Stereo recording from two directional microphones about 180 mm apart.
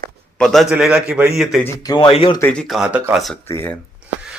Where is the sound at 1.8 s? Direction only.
25° left (ahead or behind).